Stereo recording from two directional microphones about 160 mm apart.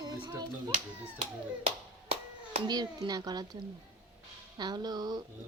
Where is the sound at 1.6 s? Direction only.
35° right (ahead or behind).